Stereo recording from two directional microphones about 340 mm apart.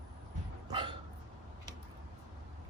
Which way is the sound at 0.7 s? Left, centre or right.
Centre.